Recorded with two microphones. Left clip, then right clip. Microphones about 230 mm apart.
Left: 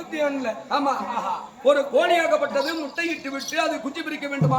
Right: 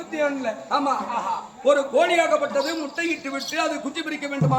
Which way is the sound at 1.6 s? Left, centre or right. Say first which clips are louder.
Even; centre.